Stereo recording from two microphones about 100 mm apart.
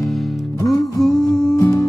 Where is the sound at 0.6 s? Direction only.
35° left (ahead or behind).